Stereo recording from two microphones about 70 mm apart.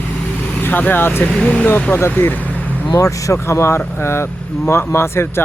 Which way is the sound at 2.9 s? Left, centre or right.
Left.